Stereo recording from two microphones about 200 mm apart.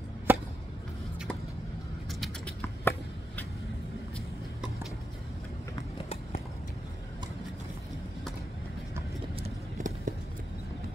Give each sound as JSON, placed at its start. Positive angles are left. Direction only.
{"t": 0.3, "sound": "chop", "side_deg": -10}
{"t": 2.0, "sound": "a sound", "side_deg": 0}
{"t": 9.4, "sound": "vehicle", "side_deg": -40}